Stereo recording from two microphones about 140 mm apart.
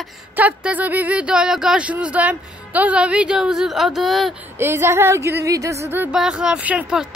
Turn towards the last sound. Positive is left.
turn(degrees=-5)  # may be behind; listen again after turning